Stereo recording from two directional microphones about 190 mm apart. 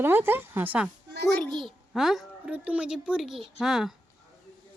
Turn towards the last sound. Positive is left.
turn(degrees=0)  # may be behind; listen again after turning